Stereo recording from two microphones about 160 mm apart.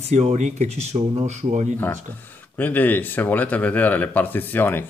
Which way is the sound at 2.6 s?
10° left (ahead or behind).